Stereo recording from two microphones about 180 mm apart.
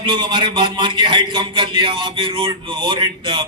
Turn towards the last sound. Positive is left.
turn(degrees=-25)  # may be behind; listen again after turning